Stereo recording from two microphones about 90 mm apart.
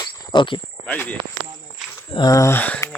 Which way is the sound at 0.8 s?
20° left (ahead or behind).